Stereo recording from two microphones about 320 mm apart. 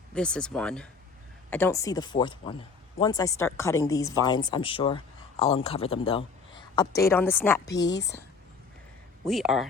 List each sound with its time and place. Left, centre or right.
0.1 s speech: centre
7.8 s speech: left
9.2 s speech: centre